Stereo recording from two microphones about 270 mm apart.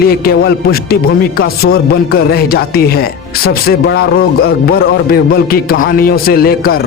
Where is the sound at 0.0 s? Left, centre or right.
Left.